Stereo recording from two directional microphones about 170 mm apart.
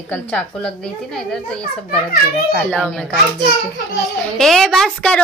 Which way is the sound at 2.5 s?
5° left (ahead or behind).